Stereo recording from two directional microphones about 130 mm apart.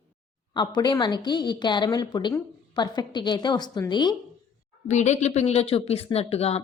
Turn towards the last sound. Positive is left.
turn(degrees=50)  # may be behind; listen again after turning